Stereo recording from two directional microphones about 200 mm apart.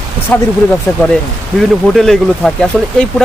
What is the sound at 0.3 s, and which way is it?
Speech, 5° left (ahead or behind).